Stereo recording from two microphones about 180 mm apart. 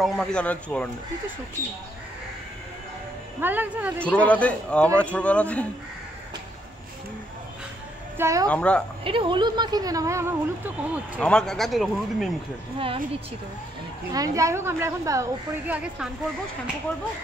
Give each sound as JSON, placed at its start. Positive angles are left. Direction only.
{"t": 0.0, "sound": "a man's voice", "side_deg": 0}
{"t": 3.3, "sound": "a woman's voice", "side_deg": -10}
{"t": 4.0, "sound": "a man's voice", "side_deg": 5}
{"t": 8.2, "sound": "a woman's voice", "side_deg": -15}
{"t": 8.5, "sound": "a man's voice", "side_deg": 5}
{"t": 9.0, "sound": "speech", "side_deg": -30}
{"t": 11.1, "sound": "a man's voice", "side_deg": 5}
{"t": 12.7, "sound": "speech", "side_deg": -30}
{"t": 14.1, "sound": "a woman's voice", "side_deg": -20}